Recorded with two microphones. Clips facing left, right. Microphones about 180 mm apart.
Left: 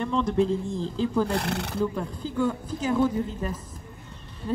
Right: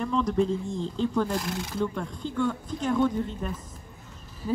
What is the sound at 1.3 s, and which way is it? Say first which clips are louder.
Speech: left 2 dB; 65° left (ahead or behind).